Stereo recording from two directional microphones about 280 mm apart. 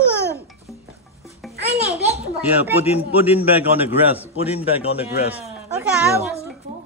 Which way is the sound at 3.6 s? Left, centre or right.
Centre.